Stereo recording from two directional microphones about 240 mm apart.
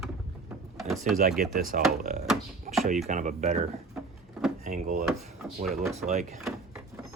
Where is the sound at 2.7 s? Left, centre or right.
Right.